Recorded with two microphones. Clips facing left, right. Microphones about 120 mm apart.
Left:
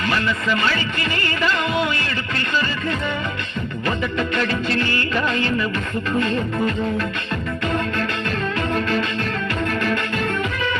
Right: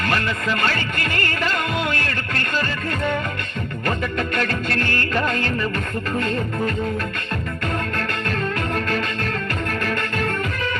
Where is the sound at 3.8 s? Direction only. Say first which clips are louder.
Left 1 dB; 50° right (ahead or behind).